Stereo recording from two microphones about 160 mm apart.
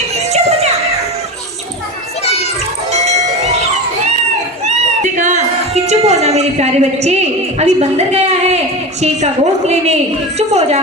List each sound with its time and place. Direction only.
0.3 s music: 40° right (ahead or behind)
2.9 s bell: 45° right (ahead or behind)
4.6 s a sound: 50° right (ahead or behind)
7.6 s a woman's voice: 40° right (ahead or behind)